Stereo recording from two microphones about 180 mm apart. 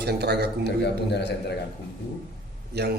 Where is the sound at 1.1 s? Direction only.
70° left (ahead or behind).